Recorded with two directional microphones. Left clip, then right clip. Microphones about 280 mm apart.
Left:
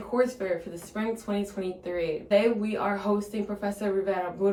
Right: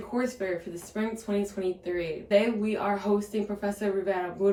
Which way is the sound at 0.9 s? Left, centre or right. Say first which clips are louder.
Even; centre.